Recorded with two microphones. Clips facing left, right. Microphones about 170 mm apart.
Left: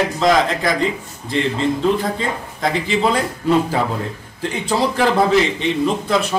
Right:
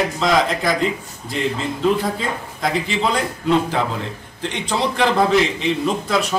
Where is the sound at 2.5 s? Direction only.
Centre (ahead or behind).